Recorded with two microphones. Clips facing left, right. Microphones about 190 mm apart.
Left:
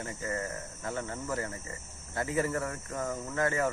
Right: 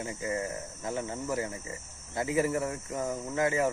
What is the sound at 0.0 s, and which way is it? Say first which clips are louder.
Speech: right 3 dB; 15° right (ahead or behind).